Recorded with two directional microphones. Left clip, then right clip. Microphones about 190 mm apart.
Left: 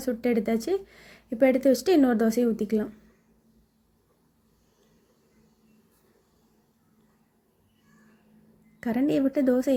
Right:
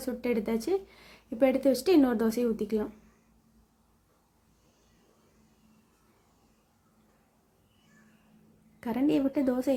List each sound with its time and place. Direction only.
0.0 s speech: 15° left (ahead or behind)
8.8 s speech: 15° left (ahead or behind)